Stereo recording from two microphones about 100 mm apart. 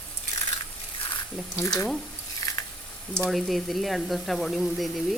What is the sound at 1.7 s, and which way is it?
Speech, centre (ahead or behind).